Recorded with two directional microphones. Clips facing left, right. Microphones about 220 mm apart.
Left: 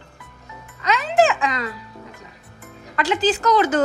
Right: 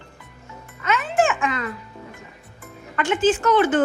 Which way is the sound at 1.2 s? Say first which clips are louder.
Left 3 dB; 35° left (ahead or behind).